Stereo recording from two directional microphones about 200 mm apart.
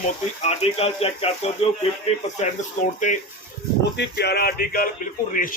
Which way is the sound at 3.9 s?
55° left (ahead or behind).